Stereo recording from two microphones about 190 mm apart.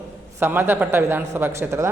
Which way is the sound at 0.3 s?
10° right (ahead or behind).